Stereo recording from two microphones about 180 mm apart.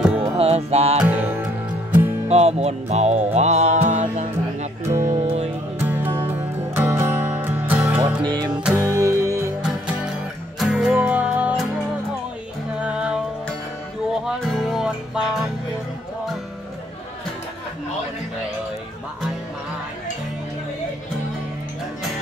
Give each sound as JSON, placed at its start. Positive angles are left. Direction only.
{"t": 0.2, "sound": "music", "side_deg": -35}
{"t": 0.9, "sound": "music", "side_deg": -10}
{"t": 2.2, "sound": "music", "side_deg": -35}
{"t": 5.9, "sound": "music", "side_deg": -10}
{"t": 8.2, "sound": "music", "side_deg": -25}
{"t": 8.6, "sound": "music", "side_deg": -15}
{"t": 10.6, "sound": "music", "side_deg": -5}
{"t": 12.8, "sound": "music", "side_deg": -5}
{"t": 14.2, "sound": "music", "side_deg": 0}